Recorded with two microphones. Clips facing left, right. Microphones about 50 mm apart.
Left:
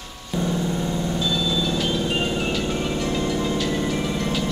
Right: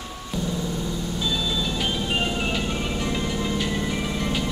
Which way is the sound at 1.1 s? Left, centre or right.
Centre.